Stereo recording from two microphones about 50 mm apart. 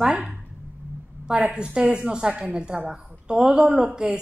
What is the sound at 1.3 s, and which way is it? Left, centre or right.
A woman's voice, right.